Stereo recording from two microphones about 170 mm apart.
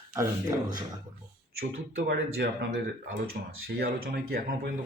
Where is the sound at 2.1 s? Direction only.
70° right (ahead or behind).